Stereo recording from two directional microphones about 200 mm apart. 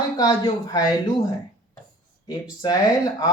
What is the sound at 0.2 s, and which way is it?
Speech, 20° left (ahead or behind).